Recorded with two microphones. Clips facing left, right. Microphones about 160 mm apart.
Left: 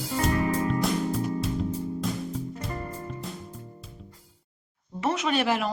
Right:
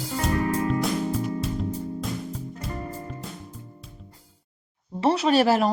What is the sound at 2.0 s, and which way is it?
Music, centre (ahead or behind).